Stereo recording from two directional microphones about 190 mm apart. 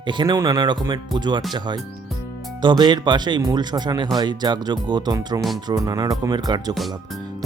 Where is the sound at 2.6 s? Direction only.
25° right (ahead or behind).